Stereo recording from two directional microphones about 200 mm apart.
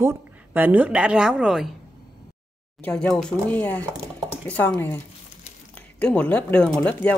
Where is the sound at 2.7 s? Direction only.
5° left (ahead or behind).